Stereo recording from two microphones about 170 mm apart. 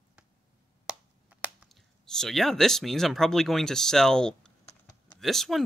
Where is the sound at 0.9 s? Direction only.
5° right (ahead or behind).